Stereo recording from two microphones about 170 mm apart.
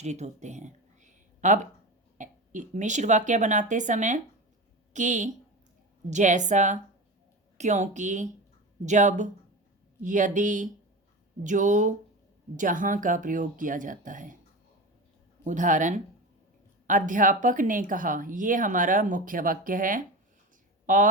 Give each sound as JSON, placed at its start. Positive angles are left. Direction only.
{"t": 0.0, "sound": "a sound", "side_deg": -40}
{"t": 2.1, "sound": "a woman's voice", "side_deg": -50}
{"t": 15.4, "sound": "a woman's voice", "side_deg": -50}